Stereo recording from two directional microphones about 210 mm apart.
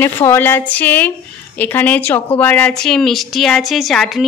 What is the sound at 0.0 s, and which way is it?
A woman's voice, 10° left (ahead or behind).